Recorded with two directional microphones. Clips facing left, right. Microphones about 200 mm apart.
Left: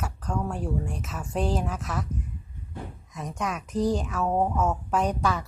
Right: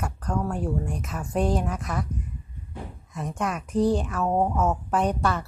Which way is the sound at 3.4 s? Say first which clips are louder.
Right 3 dB; 10° right (ahead or behind).